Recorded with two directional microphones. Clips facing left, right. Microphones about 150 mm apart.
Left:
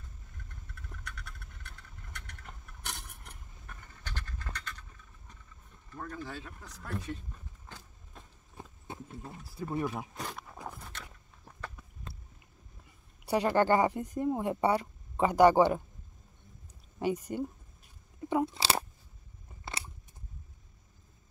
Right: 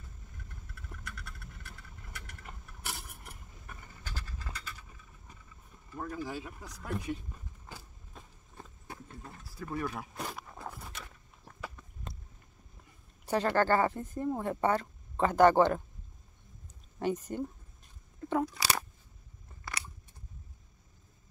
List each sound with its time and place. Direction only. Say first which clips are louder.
0.7 s vehicle: right 1 dB; 5° right (ahead or behind)
5.9 s speech: right 3 dB; 10° right (ahead or behind)
7.6 s vehicle: right 2 dB; 5° right (ahead or behind)
8.8 s a sound: left 4 dB; 25° left (ahead or behind)
10.1 s a sound: right 1 dB; 5° right (ahead or behind)
13.2 s speech: left 1 dB; 15° left (ahead or behind)
17.0 s speech: left 1 dB; 10° left (ahead or behind)
18.4 s crunch: left 2 dB; 25° left (ahead or behind)